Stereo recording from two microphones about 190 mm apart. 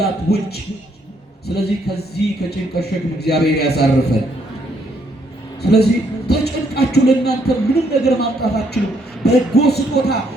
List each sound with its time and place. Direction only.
0.0 s speech: 55° left (ahead or behind)
5.6 s speech: 55° left (ahead or behind)